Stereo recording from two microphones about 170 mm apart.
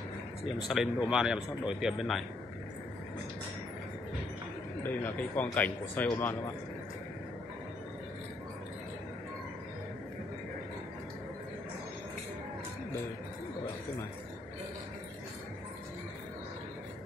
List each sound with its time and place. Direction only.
0.7 s speech: 5° right (ahead or behind)
4.8 s a man's voice: 10° left (ahead or behind)